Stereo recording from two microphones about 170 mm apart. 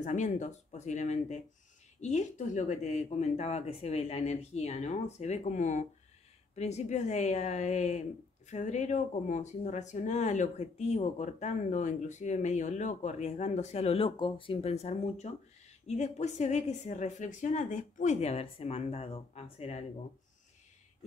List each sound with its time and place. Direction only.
0.0 s a woman's voice: 45° left (ahead or behind)